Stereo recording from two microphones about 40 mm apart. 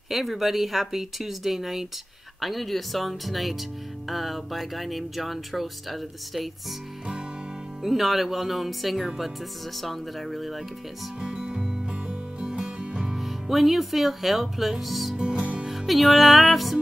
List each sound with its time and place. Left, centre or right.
0.1 s speech: centre
7.8 s speech: centre
11.1 s music: right
13.1 s speech: centre
15.3 s music: right
15.6 s music: centre